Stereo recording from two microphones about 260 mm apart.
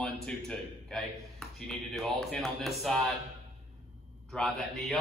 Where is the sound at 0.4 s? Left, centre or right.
Centre.